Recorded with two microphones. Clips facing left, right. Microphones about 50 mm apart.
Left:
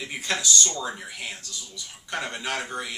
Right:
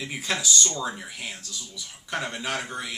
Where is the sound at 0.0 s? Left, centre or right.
Centre.